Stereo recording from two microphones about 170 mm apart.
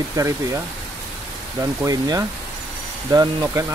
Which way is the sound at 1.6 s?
20° right (ahead or behind).